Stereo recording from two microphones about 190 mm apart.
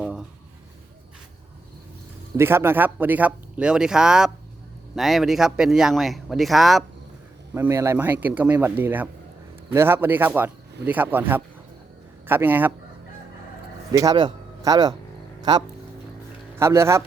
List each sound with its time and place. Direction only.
0.0 s a sound: 5° right (ahead or behind)
2.3 s speech: 15° right (ahead or behind)
7.5 s speech: 15° right (ahead or behind)
13.9 s speech: 20° right (ahead or behind)